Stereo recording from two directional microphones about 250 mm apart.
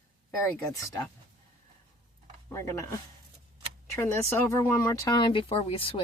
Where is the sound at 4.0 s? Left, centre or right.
Centre.